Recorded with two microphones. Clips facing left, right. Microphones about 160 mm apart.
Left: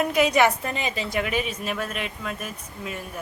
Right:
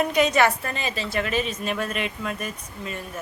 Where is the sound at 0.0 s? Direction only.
5° left (ahead or behind).